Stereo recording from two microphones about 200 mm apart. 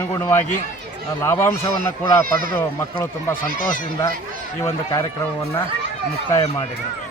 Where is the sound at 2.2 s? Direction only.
45° right (ahead or behind).